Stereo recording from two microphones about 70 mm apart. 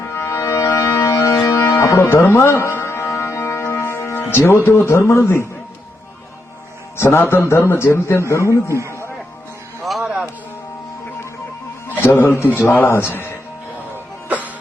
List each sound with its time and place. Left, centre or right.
0.1 s music: left
2.0 s music: left
6.9 s a man's voice: left
9.8 s a sound: centre
11.9 s a man's voice: left
14.3 s music: right